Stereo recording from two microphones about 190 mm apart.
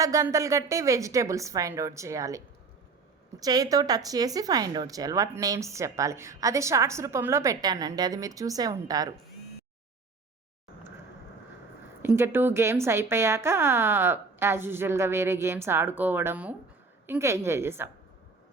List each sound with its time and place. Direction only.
0.0 s speech: 15° right (ahead or behind)
3.4 s speech: 20° right (ahead or behind)
12.0 s speech: 15° right (ahead or behind)